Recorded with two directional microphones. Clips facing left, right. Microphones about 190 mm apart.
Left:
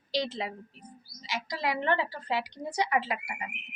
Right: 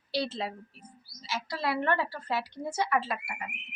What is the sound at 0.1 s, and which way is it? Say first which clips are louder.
A woman's voice: even; 15° left (ahead or behind).